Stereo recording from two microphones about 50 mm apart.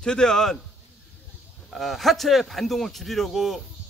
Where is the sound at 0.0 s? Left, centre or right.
Centre.